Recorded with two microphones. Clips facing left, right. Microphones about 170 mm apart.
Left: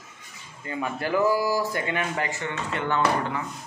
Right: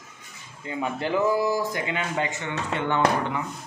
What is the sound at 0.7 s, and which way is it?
Speech, 20° right (ahead or behind).